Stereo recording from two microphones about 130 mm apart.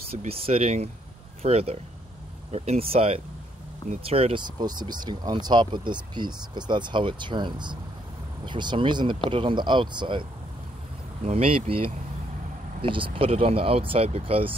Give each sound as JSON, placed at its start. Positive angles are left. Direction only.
{"t": 0.1, "sound": "speech", "side_deg": -50}
{"t": 4.6, "sound": "speech", "side_deg": -35}
{"t": 11.2, "sound": "speech", "side_deg": -50}